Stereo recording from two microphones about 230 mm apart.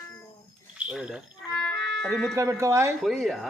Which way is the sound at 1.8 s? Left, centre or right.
Right.